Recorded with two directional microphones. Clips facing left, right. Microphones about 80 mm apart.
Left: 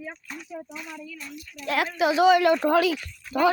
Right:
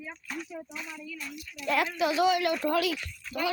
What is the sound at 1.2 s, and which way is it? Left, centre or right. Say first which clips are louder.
Speech: left 1 dB; centre.